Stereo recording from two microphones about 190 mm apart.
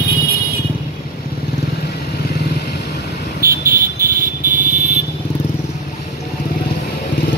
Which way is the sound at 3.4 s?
50° right (ahead or behind).